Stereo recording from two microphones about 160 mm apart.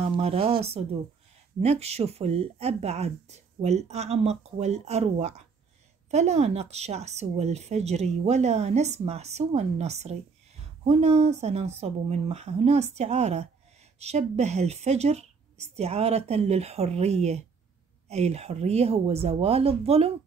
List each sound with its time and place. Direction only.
0.0 s speech: 40° right (ahead or behind)